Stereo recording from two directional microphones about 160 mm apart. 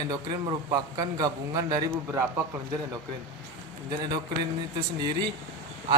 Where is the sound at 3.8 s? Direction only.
25° right (ahead or behind).